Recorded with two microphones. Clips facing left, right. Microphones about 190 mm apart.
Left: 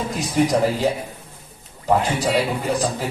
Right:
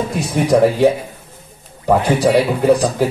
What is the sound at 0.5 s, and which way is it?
Speech, 65° right (ahead or behind).